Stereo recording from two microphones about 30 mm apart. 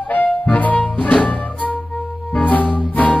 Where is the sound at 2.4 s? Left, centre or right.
Left.